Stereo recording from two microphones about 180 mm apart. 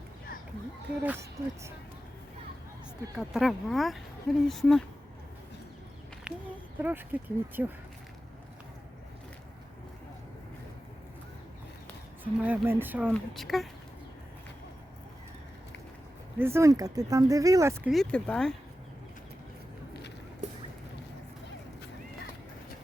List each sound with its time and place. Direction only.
1.0 s speech: 15° right (ahead or behind)
3.2 s speech: centre (ahead or behind)
6.3 s speech: 5° right (ahead or behind)
12.2 s speech: 10° right (ahead or behind)
16.4 s speech: 15° right (ahead or behind)
17.8 s speech: centre (ahead or behind)